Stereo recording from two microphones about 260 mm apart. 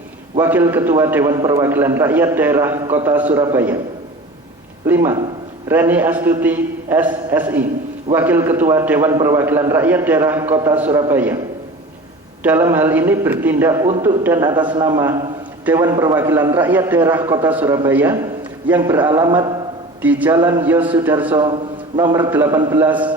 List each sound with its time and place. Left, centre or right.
0.3 s a man's voice: centre
4.9 s a man's voice: centre
12.4 s a man's voice: centre
21.4 s a man's voice: centre